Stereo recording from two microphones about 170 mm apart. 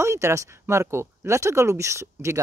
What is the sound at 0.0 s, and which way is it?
Speech, 15° right (ahead or behind).